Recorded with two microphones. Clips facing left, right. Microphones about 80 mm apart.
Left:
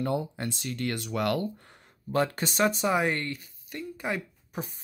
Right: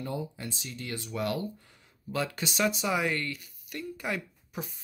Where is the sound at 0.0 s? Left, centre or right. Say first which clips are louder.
Left 6 dB; left.